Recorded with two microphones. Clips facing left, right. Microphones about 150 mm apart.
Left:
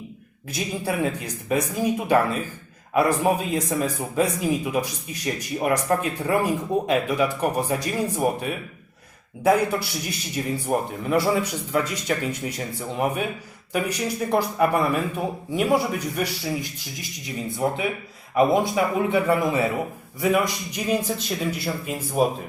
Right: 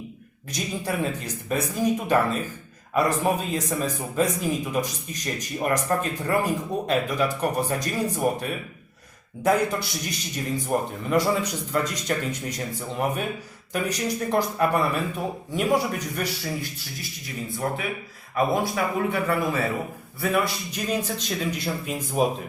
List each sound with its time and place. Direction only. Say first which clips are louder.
0.5 s speech: left 2 dB; 10° left (ahead or behind)
10.1 s speech: left 3 dB; 10° left (ahead or behind)
13.7 s speech: left 1 dB; 10° left (ahead or behind)